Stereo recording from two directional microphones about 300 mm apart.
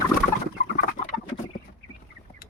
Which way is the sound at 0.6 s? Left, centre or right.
Left.